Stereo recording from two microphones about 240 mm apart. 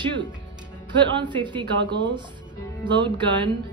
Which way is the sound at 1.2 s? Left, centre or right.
Centre.